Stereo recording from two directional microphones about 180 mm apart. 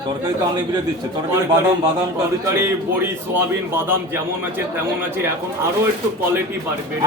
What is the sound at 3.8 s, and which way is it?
Speech, 10° right (ahead or behind).